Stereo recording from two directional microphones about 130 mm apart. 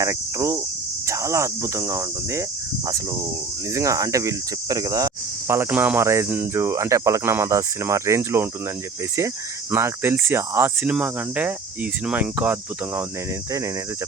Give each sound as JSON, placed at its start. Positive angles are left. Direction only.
{"t": 0.0, "sound": "speech", "side_deg": -25}
{"t": 3.7, "sound": "speech", "side_deg": -25}
{"t": 9.7, "sound": "speech", "side_deg": -20}